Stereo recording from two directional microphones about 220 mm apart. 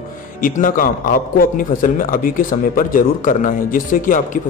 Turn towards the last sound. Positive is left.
turn(degrees=35)  # may be behind; listen again after turning